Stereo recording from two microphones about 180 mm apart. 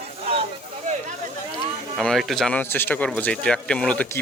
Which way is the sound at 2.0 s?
Centre (ahead or behind).